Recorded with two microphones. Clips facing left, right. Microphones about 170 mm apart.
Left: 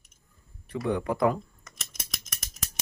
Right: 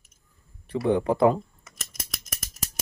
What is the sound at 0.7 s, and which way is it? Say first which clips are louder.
Speech: right 5 dB; 30° right (ahead or behind).